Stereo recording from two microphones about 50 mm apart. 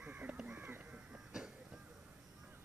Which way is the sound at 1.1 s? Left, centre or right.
Centre.